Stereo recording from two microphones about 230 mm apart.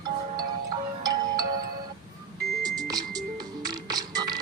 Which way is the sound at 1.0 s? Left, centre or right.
Centre.